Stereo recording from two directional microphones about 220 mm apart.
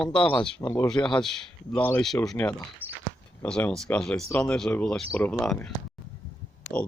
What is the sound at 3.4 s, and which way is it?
Speech, 5° left (ahead or behind).